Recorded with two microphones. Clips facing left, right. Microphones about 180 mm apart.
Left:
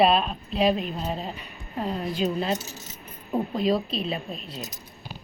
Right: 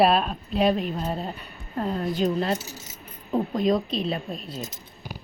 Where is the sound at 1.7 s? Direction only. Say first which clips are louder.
Right 2 dB; 10° left (ahead or behind).